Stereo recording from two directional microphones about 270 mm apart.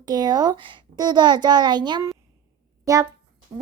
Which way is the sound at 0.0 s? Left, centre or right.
Centre.